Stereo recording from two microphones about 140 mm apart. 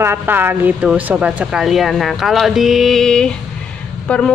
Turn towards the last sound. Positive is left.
turn(degrees=5)  # may be behind; listen again after turning